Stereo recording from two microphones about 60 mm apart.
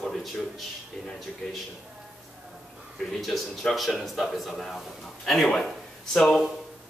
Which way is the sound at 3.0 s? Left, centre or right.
Centre.